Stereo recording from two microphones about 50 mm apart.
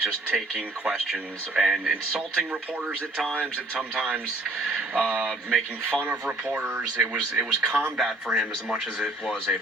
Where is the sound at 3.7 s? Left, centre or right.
Centre.